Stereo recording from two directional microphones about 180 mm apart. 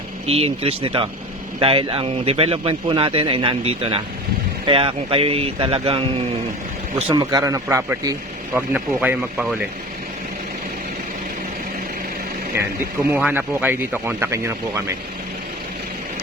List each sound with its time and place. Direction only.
0.3 s speech: 35° right (ahead or behind); by 9.6 s 5° right (ahead or behind)
13.1 s speech: 10° right (ahead or behind)